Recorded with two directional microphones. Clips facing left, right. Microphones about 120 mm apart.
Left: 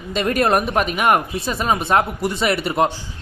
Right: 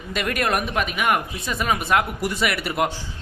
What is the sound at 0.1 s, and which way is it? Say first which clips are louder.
Speech: left 6 dB; 30° left (ahead or behind).